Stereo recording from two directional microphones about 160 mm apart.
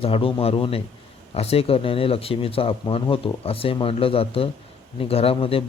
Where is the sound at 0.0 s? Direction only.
35° left (ahead or behind).